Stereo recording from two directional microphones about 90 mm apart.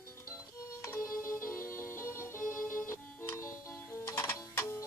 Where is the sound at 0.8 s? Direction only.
35° left (ahead or behind).